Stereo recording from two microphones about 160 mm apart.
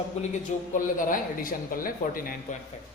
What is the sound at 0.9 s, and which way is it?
Speech, 55° left (ahead or behind).